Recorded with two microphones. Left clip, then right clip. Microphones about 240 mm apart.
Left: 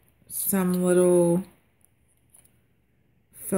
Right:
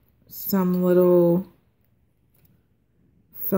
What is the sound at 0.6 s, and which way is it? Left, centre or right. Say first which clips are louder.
Speech: right 2 dB; centre.